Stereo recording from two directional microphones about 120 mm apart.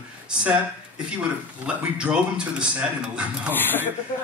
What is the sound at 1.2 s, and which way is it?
Speech, 10° right (ahead or behind).